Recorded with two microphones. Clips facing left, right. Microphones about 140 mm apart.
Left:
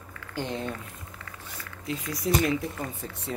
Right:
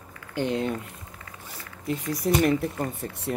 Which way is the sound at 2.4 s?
55° right (ahead or behind).